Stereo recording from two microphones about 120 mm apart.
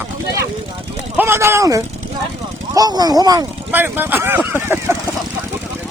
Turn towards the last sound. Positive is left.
turn(degrees=-20)  # may be behind; listen again after turning